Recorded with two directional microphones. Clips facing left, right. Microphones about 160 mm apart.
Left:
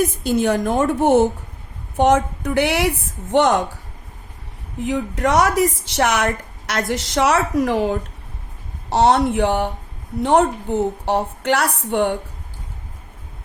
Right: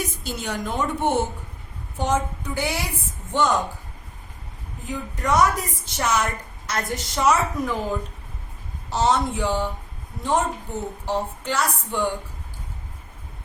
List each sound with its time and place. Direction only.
0.0 s a woman's voice: 55° left (ahead or behind)
2.0 s a woman's voice: 70° left (ahead or behind)
4.8 s a woman's voice: 75° left (ahead or behind)